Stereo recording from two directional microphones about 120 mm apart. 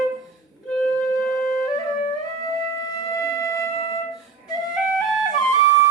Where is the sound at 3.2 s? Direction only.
25° left (ahead or behind).